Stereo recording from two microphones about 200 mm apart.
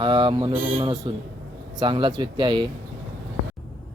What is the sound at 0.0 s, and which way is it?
Mantra, 25° right (ahead or behind).